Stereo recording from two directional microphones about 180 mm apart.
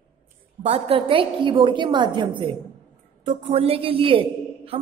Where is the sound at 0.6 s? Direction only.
35° right (ahead or behind).